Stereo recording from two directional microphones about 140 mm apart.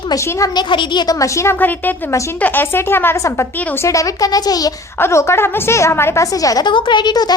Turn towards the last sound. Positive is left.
turn(degrees=30)  # may be behind; listen again after turning